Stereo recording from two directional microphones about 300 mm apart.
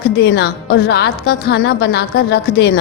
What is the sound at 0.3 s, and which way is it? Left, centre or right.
A woman's voice, left.